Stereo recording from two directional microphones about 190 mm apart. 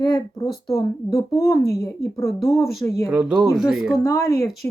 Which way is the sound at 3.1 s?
5° right (ahead or behind).